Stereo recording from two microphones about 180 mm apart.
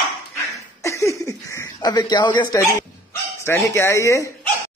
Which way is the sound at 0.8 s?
15° left (ahead or behind).